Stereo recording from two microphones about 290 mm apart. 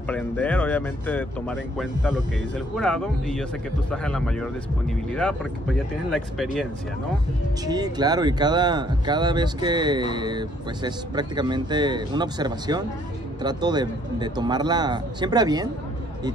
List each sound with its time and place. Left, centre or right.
0.1 s speech: centre
7.6 s speech: centre